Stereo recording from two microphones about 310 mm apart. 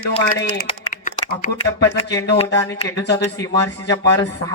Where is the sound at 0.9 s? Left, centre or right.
Left.